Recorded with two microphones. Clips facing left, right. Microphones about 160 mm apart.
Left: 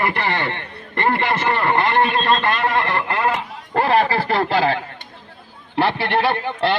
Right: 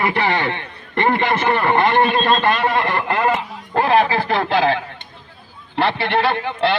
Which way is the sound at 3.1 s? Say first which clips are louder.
Right 2 dB; 15° right (ahead or behind).